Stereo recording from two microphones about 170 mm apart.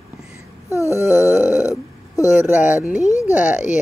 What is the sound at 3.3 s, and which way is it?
Speech, 10° right (ahead or behind).